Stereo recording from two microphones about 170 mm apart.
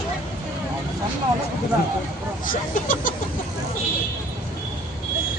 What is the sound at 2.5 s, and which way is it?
Speech, 50° left (ahead or behind).